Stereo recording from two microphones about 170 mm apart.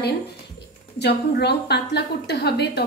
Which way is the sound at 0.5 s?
80° left.